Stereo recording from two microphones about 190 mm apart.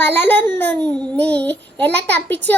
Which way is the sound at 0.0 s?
10° left (ahead or behind).